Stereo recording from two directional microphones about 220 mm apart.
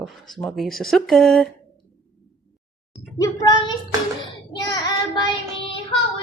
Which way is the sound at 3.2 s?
20° left (ahead or behind).